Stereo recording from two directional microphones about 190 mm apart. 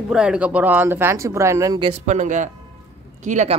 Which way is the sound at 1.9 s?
40° right (ahead or behind).